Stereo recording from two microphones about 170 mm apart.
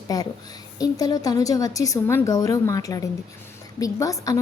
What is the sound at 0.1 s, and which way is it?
Speech, 20° left (ahead or behind).